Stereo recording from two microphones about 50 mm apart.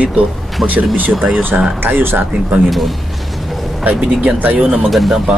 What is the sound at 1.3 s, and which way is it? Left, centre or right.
Speech, right.